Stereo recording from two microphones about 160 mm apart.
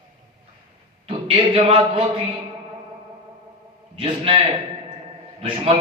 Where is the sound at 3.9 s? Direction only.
35° right (ahead or behind).